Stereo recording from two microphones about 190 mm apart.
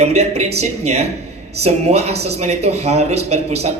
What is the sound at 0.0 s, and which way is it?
Speech, 35° right (ahead or behind).